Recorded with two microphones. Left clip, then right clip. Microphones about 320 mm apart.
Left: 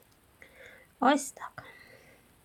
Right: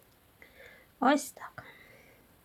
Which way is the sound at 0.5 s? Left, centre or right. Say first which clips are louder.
Left 2 dB; centre.